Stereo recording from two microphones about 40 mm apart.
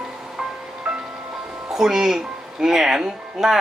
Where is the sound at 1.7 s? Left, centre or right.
Centre.